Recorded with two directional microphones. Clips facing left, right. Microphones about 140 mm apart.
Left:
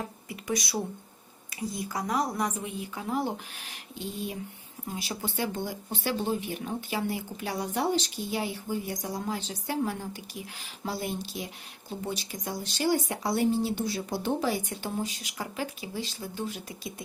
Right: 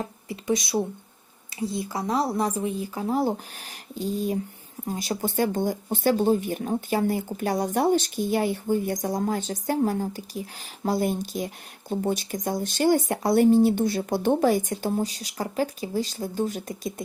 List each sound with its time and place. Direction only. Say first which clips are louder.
0.3 s a woman's voice: right 7 dB; 25° right (ahead or behind); by 16.9 s 45° right (ahead or behind)